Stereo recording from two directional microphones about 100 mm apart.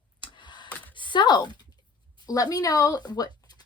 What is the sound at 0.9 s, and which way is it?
A woman's voice, 55° left (ahead or behind).